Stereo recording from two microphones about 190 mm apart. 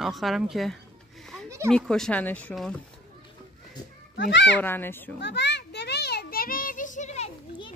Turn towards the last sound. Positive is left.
turn(degrees=35)  # may be behind; listen again after turning